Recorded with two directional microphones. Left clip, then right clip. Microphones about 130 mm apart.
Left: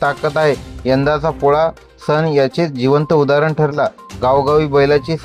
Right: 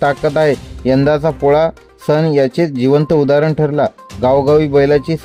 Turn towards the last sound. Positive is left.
turn(degrees=-35)  # may be behind; listen again after turning